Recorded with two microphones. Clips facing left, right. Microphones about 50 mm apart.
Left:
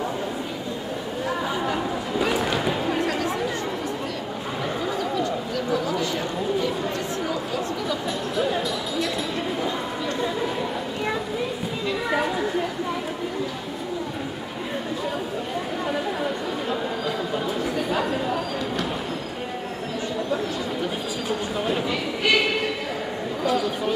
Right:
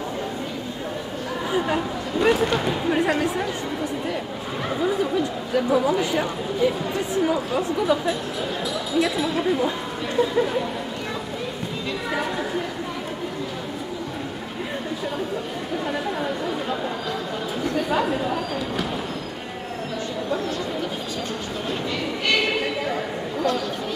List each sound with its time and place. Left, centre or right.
2.1 s speech: centre
2.9 s speech: centre
4.8 s speech: centre
8.9 s speech: centre
12.1 s speech: centre
17.6 s speech: centre